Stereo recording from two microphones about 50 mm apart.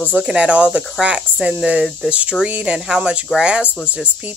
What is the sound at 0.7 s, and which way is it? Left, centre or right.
Speech, centre.